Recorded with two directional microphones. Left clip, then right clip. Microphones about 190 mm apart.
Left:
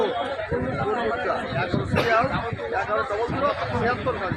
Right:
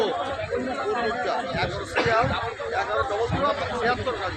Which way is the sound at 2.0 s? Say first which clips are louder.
Left 1 dB; 40° left (ahead or behind).